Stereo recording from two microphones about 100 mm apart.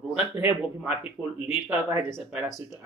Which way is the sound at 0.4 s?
20° right (ahead or behind).